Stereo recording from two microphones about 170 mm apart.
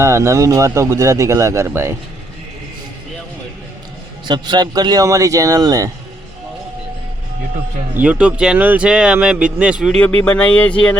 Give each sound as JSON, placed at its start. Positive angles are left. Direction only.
{"t": 0.0, "sound": "speech", "side_deg": -15}
{"t": 4.3, "sound": "a man's voice", "side_deg": -25}
{"t": 7.9, "sound": "speech", "side_deg": -10}
{"t": 10.0, "sound": "speech", "side_deg": 10}